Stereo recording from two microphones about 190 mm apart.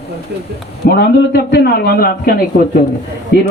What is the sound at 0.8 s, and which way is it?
A man's voice, 55° left (ahead or behind).